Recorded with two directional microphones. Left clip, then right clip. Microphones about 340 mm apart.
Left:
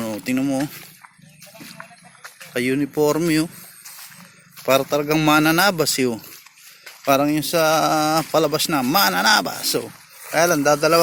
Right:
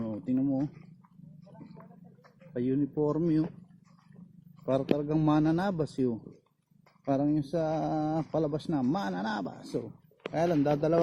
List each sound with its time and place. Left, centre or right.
0.4 s speech: left
2.5 s speech: left
4.6 s speech: centre
10.3 s a man's voice: centre